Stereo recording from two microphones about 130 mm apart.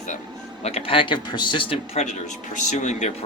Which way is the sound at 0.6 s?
50° left (ahead or behind).